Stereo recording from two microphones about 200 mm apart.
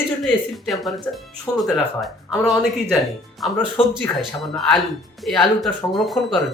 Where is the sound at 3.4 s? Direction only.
Centre (ahead or behind).